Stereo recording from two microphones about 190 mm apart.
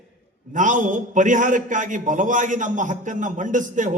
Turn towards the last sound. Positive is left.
turn(degrees=-40)  # may be behind; listen again after turning